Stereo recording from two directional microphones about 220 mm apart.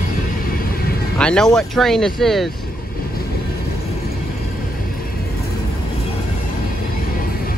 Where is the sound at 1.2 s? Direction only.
5° left (ahead or behind).